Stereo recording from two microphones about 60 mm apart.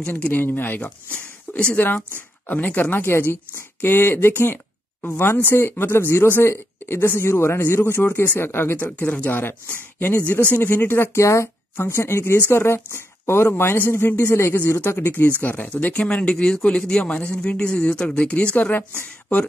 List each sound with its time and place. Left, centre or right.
0.2 s speech: left
1.6 s speech: centre; by 8.9 s left
8.9 s speech: left
15.9 s a man's voice: centre